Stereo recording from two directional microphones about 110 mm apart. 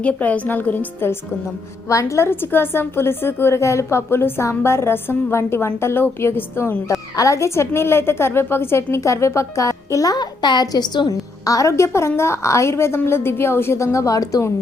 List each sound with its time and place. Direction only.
0.0 s a woman's voice: 15° left (ahead or behind)
1.9 s a woman's voice: 30° left (ahead or behind)
11.1 s a woman's voice: 30° left (ahead or behind)